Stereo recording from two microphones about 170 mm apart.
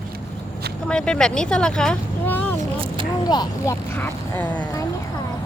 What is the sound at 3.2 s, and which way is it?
Speech, 25° left (ahead or behind).